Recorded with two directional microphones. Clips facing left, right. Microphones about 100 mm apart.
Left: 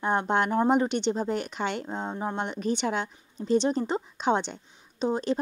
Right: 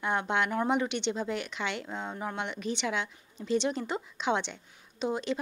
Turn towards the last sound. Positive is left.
turn(degrees=40)  # may be behind; listen again after turning